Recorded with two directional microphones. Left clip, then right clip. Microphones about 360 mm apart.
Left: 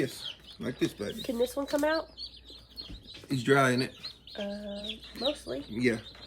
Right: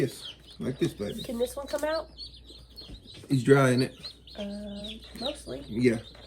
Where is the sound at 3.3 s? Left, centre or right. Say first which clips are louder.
Right 3 dB; centre.